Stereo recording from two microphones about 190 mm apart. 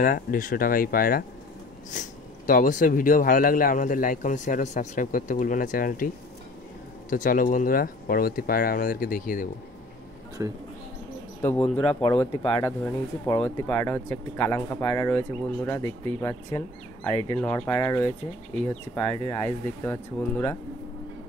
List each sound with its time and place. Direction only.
0.0 s speech: 45° left (ahead or behind)
10.4 s speech: 15° right (ahead or behind)
11.4 s speech: 5° left (ahead or behind)